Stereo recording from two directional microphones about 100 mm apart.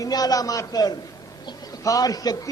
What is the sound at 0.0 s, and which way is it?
A man's voice, 40° left (ahead or behind).